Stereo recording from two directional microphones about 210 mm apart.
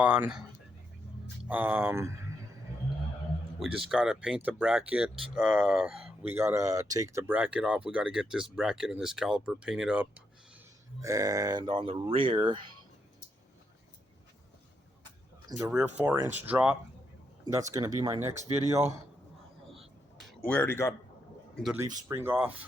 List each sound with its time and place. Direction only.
0.0 s speech: 5° right (ahead or behind)
1.5 s speech: 10° right (ahead or behind)
3.6 s speech: centre (ahead or behind)
11.0 s speech: 15° right (ahead or behind)
15.4 s speech: 20° right (ahead or behind)
15.7 s speech: 5° right (ahead or behind)
20.1 s a sound: 5° left (ahead or behind)
21.5 s speech: centre (ahead or behind)
21.8 s speech: 10° right (ahead or behind)